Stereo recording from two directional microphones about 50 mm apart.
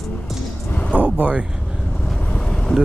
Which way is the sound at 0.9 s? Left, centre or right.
Right.